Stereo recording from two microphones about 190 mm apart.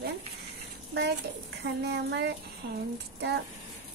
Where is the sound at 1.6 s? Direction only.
65° right (ahead or behind).